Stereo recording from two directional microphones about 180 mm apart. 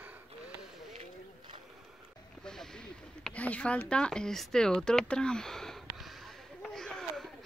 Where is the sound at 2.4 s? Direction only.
5° left (ahead or behind).